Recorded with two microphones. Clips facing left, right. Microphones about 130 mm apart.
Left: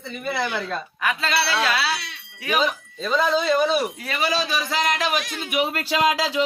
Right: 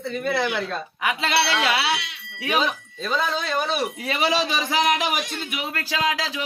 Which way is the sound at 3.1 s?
Centre (ahead or behind).